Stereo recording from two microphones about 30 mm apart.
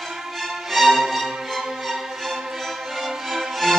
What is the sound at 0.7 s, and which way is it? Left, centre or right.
Music, centre.